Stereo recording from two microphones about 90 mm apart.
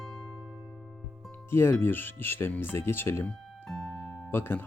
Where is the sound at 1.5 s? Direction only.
25° left (ahead or behind).